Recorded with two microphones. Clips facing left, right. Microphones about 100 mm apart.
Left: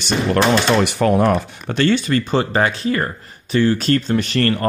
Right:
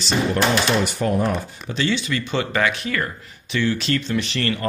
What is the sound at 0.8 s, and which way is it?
Speech, 75° left (ahead or behind).